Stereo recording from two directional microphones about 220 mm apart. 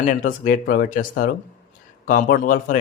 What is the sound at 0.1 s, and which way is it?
Speech, 35° left (ahead or behind).